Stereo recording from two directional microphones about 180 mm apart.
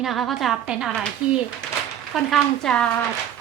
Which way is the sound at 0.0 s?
Centre (ahead or behind).